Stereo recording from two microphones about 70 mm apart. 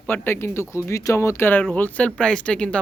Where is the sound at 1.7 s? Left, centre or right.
Left.